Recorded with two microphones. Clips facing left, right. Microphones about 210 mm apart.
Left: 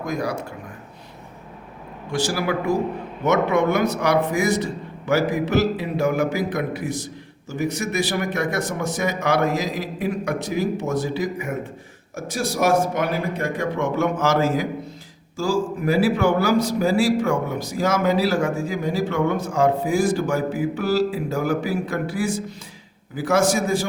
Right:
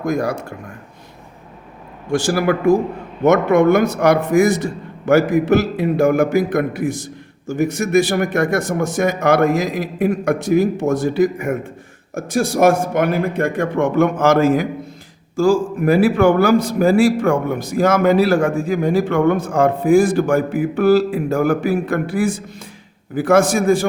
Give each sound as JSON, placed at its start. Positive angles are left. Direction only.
{"t": 0.0, "sound": "a man's voice", "side_deg": -50}
{"t": 2.0, "sound": "a man's voice", "side_deg": -50}